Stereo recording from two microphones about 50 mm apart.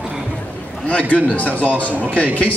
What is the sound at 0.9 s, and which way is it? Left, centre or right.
A man's voice, left.